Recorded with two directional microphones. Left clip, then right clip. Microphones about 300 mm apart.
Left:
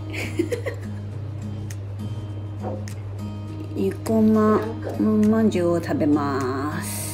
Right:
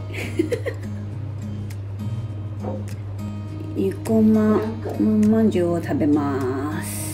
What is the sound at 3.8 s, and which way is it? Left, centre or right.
Speech, centre.